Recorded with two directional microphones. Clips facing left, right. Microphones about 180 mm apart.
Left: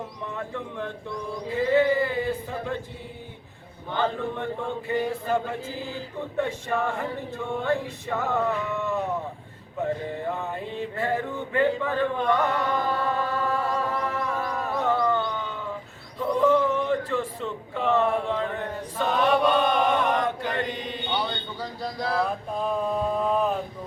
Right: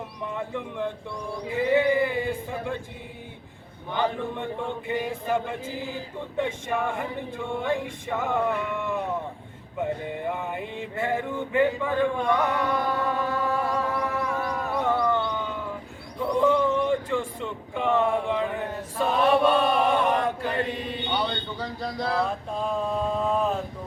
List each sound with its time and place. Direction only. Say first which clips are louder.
0.3 s male singing: right 2 dB; 15° right (ahead or behind)
3.9 s male singing: even; 15° right (ahead or behind)
16.8 s a sound: right 1 dB; 10° right (ahead or behind)
17.7 s speech: even; 10° right (ahead or behind)
18.9 s chant: right 1 dB; 5° right (ahead or behind)
20.7 s a sound: right 1 dB; centre (ahead or behind)